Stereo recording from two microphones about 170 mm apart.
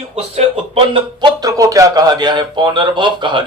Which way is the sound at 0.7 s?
30° right (ahead or behind).